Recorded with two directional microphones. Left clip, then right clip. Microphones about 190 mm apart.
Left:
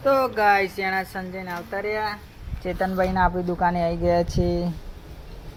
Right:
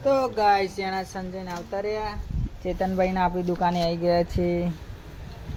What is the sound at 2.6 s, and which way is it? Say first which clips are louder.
Speech: left 1 dB; 10° right (ahead or behind).